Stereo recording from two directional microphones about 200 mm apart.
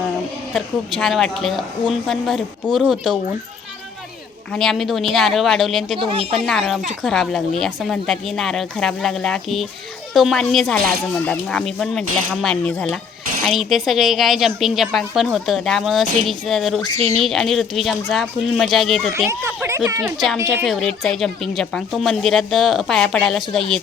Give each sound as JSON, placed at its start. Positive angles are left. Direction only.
{"t": 0.5, "sound": "a woman's voice", "side_deg": 0}
{"t": 4.5, "sound": "a woman's voice", "side_deg": 0}
{"t": 6.0, "sound": "speech", "side_deg": -25}
{"t": 6.3, "sound": "a woman's voice", "side_deg": 0}
{"t": 19.1, "sound": "a woman's voice", "side_deg": -10}